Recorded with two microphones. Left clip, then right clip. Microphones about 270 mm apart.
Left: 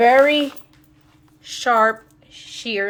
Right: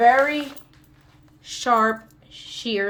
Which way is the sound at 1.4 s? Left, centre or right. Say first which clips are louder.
Left 3 dB; centre.